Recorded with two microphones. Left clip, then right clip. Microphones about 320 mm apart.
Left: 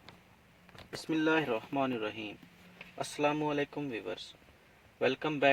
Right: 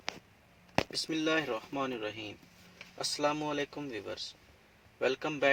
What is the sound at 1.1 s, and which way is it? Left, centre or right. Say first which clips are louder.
Speech: left 7 dB; centre.